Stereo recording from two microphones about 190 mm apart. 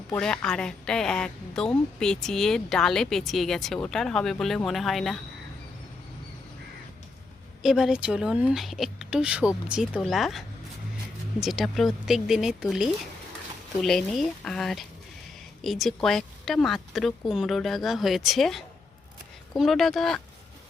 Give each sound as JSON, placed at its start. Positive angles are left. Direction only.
{"t": 0.1, "sound": "a woman's voice", "side_deg": 5}
{"t": 7.6, "sound": "a woman's voice", "side_deg": 0}